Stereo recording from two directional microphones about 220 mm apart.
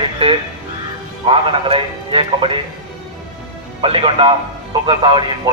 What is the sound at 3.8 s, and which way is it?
A man's voice, 25° right (ahead or behind).